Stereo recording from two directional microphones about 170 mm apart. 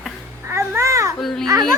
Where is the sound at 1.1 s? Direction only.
Centre (ahead or behind).